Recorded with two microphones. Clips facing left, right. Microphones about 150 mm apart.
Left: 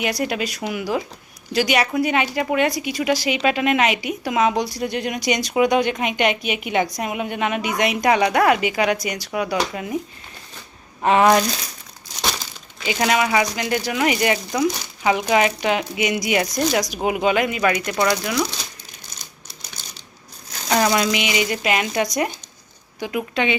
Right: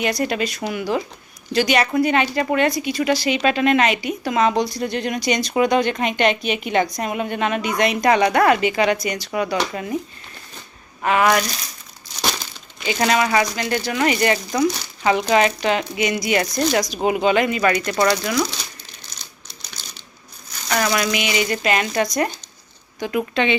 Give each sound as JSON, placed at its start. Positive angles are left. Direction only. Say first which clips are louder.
{"t": 0.0, "sound": "a woman's voice", "louder": "right 2 dB", "side_deg": 10}
{"t": 11.0, "sound": "speech", "louder": "left 2 dB", "side_deg": 30}
{"t": 12.8, "sound": "a woman's voice", "louder": "right 1 dB", "side_deg": 10}
{"t": 19.8, "sound": "crumpling", "louder": "right 1 dB", "side_deg": 50}
{"t": 20.7, "sound": "a woman's voice", "louder": "left 2 dB", "side_deg": 20}